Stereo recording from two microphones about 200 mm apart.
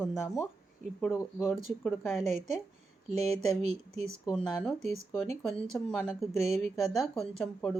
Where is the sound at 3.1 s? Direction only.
30° right (ahead or behind).